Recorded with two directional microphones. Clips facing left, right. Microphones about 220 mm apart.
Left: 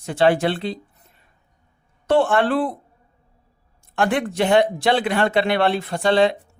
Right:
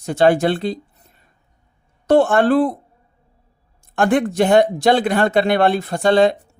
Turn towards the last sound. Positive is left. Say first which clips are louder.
# right 3 dB
turn(degrees=-45)  # may be behind; listen again after turning